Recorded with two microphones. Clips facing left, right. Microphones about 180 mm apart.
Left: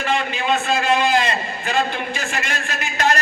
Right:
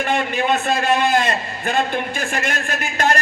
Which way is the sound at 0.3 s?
55° right (ahead or behind).